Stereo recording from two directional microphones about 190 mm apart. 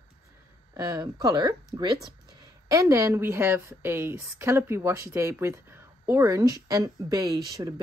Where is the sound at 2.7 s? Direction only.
15° right (ahead or behind).